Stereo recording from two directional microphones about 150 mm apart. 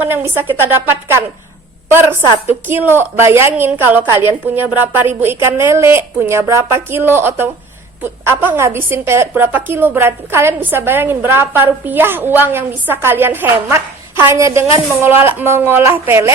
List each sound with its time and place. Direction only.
0.0 s a woman's voice: 15° right (ahead or behind)